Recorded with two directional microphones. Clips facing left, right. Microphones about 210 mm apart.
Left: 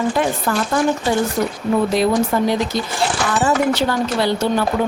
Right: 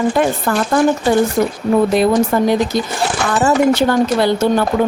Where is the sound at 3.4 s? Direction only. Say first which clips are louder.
Right 5 dB; 45° right (ahead or behind).